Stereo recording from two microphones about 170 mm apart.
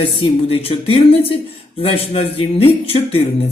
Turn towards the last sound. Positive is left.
turn(degrees=35)  # may be behind; listen again after turning